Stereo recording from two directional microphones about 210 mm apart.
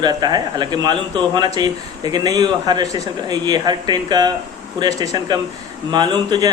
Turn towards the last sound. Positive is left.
turn(degrees=-20)  # may be behind; listen again after turning